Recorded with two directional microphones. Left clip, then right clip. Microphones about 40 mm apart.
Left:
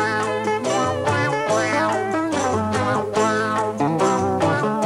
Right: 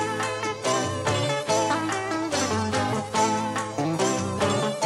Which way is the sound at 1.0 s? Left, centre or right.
Centre.